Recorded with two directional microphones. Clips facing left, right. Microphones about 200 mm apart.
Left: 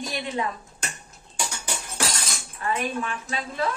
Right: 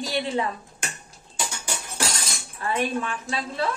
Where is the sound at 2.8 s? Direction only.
35° right (ahead or behind).